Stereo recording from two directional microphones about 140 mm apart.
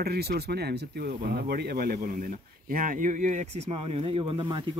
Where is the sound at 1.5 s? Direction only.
90° right; by 4.7 s 35° right (ahead or behind).